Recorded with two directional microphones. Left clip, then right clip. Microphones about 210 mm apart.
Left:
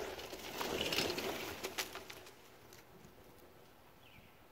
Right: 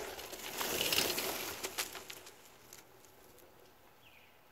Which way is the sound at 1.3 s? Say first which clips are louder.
Right 2 dB; 20° right (ahead or behind).